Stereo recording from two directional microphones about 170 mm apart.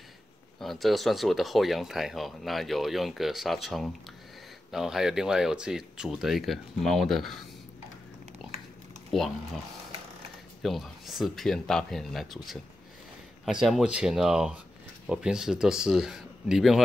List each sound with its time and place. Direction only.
0.6 s speech: centre (ahead or behind)
8.4 s dog: 5° right (ahead or behind)
9.1 s speech: centre (ahead or behind)
10.6 s speech: centre (ahead or behind)